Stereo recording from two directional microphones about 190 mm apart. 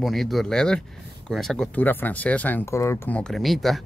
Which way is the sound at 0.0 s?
Centre (ahead or behind).